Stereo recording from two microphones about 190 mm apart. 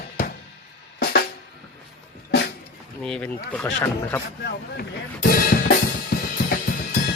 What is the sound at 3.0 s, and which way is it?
Speech, 5° left (ahead or behind).